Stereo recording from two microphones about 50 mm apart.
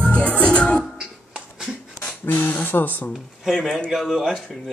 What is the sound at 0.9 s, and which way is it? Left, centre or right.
Music, centre.